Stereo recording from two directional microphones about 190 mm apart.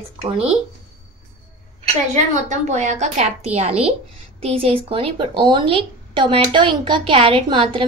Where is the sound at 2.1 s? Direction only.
40° right (ahead or behind).